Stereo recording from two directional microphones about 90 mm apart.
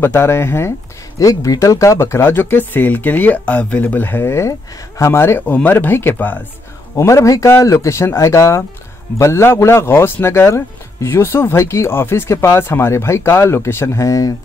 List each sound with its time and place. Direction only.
0.0 s speech: 25° left (ahead or behind)
1.2 s speech: 40° left (ahead or behind); by 6.4 s 20° left (ahead or behind)
7.0 s speech: 35° left (ahead or behind)